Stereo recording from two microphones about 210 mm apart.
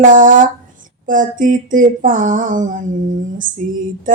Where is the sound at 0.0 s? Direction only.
40° right (ahead or behind).